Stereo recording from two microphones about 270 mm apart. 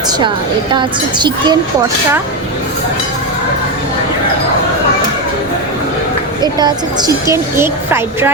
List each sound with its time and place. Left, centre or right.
0.7 s a woman's voice: centre
6.4 s a woman's voice: centre